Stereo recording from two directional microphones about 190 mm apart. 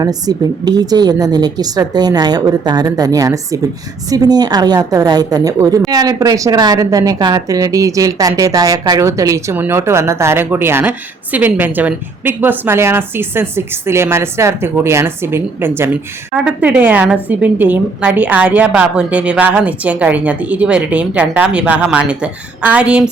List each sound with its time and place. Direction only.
0.0 s a woman's voice: 20° right (ahead or behind)